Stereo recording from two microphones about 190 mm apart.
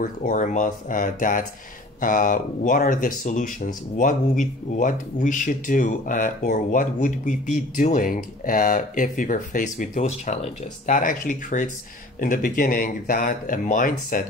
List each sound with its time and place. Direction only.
0.0 s speech: 40° left (ahead or behind)